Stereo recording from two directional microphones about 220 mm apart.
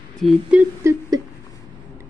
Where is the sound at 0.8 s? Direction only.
10° right (ahead or behind).